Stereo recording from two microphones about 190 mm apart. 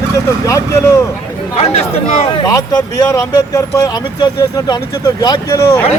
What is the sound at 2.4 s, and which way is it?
Speech, 20° left (ahead or behind).